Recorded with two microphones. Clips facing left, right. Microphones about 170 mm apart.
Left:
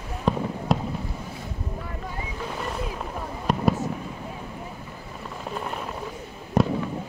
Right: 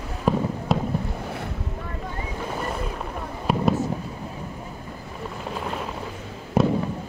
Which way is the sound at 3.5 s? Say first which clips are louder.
Right 2 dB; 5° right (ahead or behind).